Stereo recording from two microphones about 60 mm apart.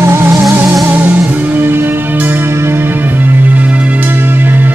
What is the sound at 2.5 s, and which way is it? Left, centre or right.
Music, right.